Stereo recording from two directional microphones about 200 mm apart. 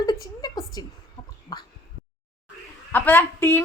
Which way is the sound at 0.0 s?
20° left (ahead or behind).